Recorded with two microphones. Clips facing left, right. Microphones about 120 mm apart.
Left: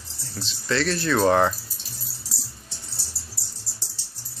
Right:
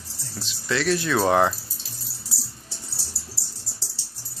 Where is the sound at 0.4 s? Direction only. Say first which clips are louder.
Left 1 dB; 10° right (ahead or behind).